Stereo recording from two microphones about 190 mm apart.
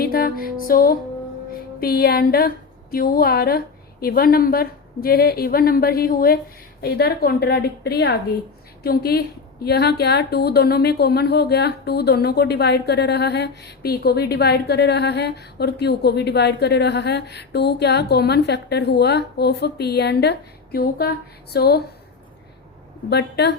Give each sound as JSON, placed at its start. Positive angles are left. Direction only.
{"t": 0.0, "sound": "music", "side_deg": 50}
{"t": 1.8, "sound": "a woman's voice", "side_deg": 55}
{"t": 23.0, "sound": "speech", "side_deg": 60}